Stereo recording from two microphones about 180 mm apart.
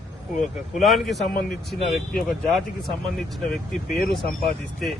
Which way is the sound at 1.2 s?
55° left (ahead or behind).